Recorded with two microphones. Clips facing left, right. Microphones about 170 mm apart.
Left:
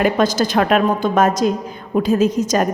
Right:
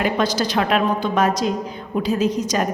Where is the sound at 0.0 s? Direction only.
50° left (ahead or behind).